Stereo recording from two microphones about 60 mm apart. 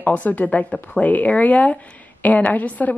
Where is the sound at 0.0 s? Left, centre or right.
Left.